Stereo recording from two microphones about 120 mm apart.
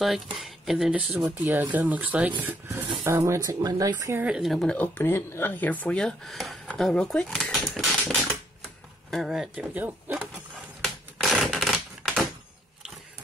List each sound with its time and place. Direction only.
0.0 s speech: centre (ahead or behind)
1.2 s speech: 15° right (ahead or behind)
4.2 s speech: 5° right (ahead or behind)
4.7 s speech: 20° left (ahead or behind); by 9.7 s 5° right (ahead or behind)
9.8 s speech: 15° right (ahead or behind)
10.8 s typewriter: centre (ahead or behind)